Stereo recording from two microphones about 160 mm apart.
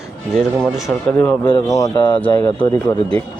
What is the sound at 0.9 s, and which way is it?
Speech, 10° left (ahead or behind).